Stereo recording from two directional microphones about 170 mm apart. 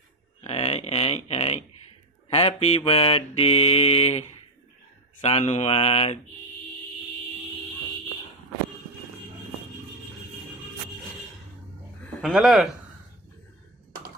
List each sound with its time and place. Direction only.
0.4 s a sound: 35° left (ahead or behind)
2.3 s mantra: 35° left (ahead or behind)
12.2 s speech: centre (ahead or behind)